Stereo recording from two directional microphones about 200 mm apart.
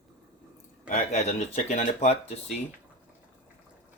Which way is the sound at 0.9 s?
35° left (ahead or behind).